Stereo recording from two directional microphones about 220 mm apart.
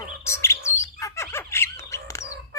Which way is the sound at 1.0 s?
10° left (ahead or behind).